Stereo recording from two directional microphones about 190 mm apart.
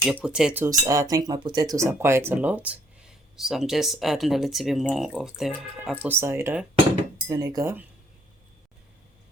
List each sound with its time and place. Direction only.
0.0 s speech: 5° right (ahead or behind)